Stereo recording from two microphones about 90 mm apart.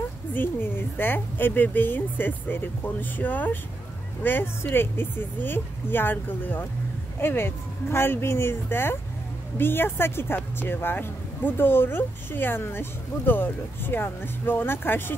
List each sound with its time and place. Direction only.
0.3 s speech: 25° left (ahead or behind)